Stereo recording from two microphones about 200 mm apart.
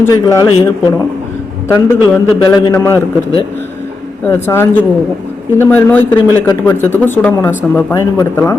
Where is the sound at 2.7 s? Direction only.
15° left (ahead or behind).